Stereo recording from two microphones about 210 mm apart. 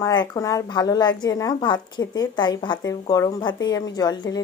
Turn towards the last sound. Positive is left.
turn(degrees=20)  # may be behind; listen again after turning